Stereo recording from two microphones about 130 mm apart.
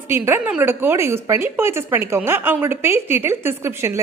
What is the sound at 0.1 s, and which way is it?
A woman's voice, 15° right (ahead or behind).